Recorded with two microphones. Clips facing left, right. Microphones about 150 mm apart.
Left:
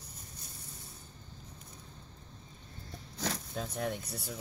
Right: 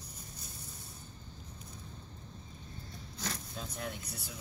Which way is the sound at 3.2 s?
70° left (ahead or behind).